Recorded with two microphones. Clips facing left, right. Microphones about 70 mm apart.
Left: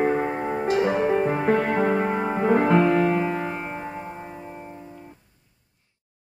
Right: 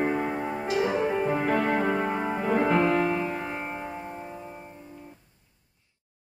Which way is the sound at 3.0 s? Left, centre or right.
Left.